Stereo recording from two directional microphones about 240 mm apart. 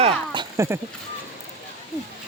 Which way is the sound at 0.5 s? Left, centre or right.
Centre.